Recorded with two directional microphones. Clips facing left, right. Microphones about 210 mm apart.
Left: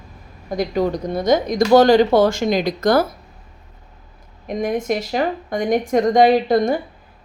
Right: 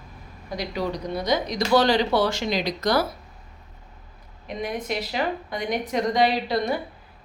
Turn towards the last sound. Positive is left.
turn(degrees=50)  # may be behind; listen again after turning